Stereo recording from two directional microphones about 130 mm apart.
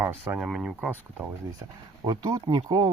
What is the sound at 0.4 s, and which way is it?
Speech, 5° right (ahead or behind).